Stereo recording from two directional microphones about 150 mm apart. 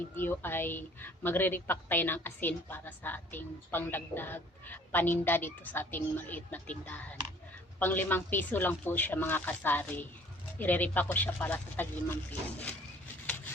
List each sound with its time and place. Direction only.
0.2 s a woman's voice: 15° left (ahead or behind)